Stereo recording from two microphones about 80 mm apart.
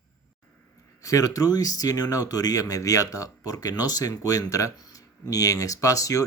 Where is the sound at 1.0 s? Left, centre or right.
Left.